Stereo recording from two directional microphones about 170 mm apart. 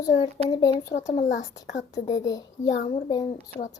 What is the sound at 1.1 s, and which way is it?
Speech, 45° left (ahead or behind).